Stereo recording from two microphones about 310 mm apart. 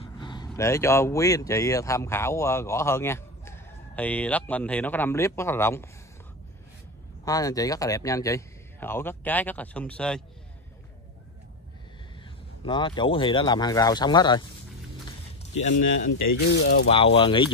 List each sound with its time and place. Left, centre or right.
0.0 s vehicle: centre
0.5 s speech: centre
7.2 s speech: centre
12.6 s speech: centre
15.6 s speech: left